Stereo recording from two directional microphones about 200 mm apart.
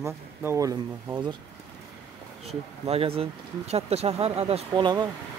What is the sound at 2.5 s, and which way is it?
Speech, 30° right (ahead or behind).